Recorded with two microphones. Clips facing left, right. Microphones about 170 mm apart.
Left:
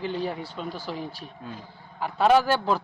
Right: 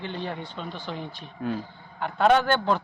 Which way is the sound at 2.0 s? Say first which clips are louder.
Left 1 dB; 5° left (ahead or behind).